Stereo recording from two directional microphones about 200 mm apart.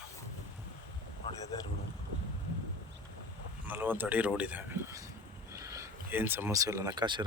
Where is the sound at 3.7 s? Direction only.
10° right (ahead or behind).